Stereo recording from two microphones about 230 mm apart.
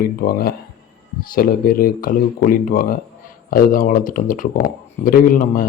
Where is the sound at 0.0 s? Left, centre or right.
Left.